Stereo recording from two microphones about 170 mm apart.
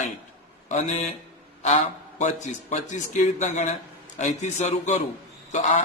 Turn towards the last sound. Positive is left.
turn(degrees=45)  # may be behind; listen again after turning